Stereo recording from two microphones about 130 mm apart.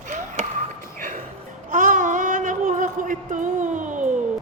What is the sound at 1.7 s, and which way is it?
Child singing, 75° right (ahead or behind).